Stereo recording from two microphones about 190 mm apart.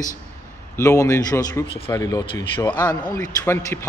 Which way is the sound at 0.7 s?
15° left (ahead or behind).